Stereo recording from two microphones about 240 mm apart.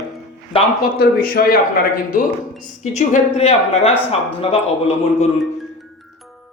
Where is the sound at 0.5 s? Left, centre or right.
Left.